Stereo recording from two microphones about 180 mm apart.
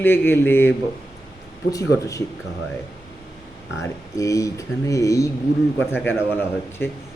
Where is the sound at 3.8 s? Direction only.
15° left (ahead or behind).